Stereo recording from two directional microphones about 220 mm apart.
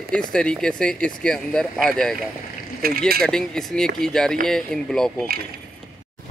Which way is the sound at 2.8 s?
40° right (ahead or behind).